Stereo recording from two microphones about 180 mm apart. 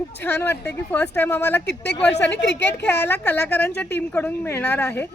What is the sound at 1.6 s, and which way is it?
Speech, 70° left (ahead or behind).